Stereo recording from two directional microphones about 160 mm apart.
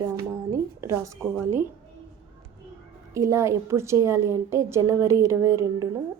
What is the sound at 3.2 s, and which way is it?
A woman's voice, 20° right (ahead or behind).